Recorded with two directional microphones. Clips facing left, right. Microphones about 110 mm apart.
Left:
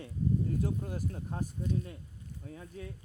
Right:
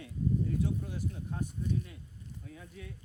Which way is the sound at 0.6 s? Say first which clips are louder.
Even; 45° left (ahead or behind).